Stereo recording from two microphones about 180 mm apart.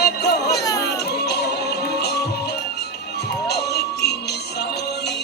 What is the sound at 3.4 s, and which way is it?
Music, 65° left (ahead or behind).